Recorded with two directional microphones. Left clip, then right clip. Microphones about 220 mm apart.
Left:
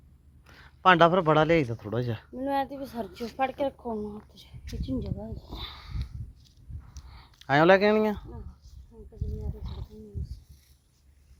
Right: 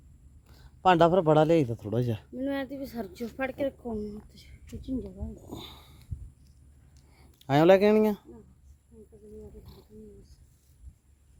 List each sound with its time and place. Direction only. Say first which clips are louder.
0.6 s a man's voice: left 2 dB; 25° right (ahead or behind)
5.5 s sniff: left 3 dB; 40° right (ahead or behind)
7.1 s speech: left 2 dB; 30° right (ahead or behind)